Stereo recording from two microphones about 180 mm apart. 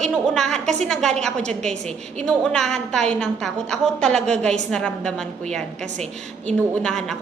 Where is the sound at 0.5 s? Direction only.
40° right (ahead or behind).